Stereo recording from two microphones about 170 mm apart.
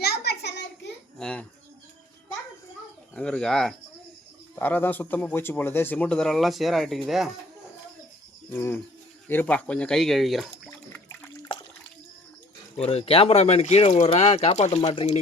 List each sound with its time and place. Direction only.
0.0 s a sound: 75° left (ahead or behind)
1.2 s speech: 5° left (ahead or behind)
3.2 s speech: 5° left (ahead or behind)
8.4 s speech: 15° left (ahead or behind)
10.9 s a sound: 10° left (ahead or behind)
12.8 s speech: 35° left (ahead or behind)